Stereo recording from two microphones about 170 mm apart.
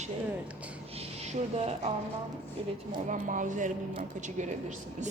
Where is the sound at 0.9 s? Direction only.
40° right (ahead or behind).